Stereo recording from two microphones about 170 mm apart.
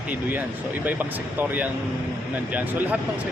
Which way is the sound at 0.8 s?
10° right (ahead or behind).